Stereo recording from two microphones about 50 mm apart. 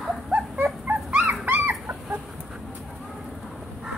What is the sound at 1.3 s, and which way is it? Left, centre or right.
Dog, right.